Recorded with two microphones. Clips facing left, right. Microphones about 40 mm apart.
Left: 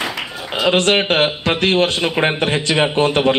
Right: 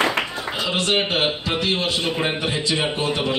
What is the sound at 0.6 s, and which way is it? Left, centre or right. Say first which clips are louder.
A man's voice: left 7 dB; left.